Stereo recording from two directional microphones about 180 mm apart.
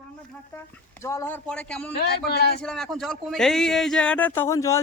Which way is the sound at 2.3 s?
60° left (ahead or behind).